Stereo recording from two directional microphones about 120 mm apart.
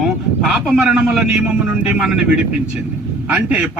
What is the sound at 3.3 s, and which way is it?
Speech, 10° right (ahead or behind).